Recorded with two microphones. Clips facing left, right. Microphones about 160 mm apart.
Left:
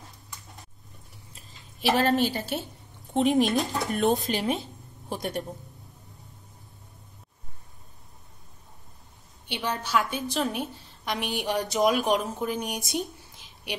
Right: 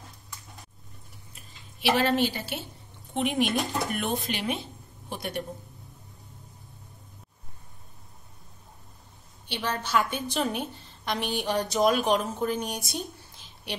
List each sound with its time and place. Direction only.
1.8 s a woman's voice: 45° left (ahead or behind)
3.4 s a woman's voice: centre (ahead or behind)
3.9 s a woman's voice: 40° left (ahead or behind)
9.5 s speech: 15° left (ahead or behind)
9.9 s a woman's voice: centre (ahead or behind)